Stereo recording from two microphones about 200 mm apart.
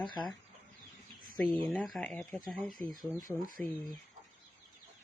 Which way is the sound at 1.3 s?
5° left (ahead or behind).